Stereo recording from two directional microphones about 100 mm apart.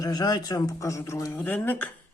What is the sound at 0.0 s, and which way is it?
Speech, 40° left (ahead or behind).